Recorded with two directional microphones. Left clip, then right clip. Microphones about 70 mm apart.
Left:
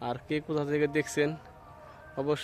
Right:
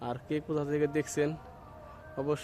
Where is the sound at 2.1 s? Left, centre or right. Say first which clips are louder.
Left 2 dB; left.